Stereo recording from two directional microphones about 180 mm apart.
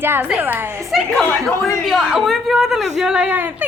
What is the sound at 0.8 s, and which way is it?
Speech, centre (ahead or behind).